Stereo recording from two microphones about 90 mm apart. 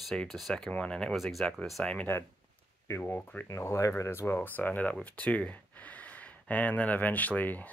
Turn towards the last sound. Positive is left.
turn(degrees=20)  # may be behind; listen again after turning